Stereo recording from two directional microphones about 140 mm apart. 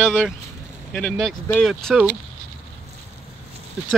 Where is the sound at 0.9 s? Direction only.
5° left (ahead or behind).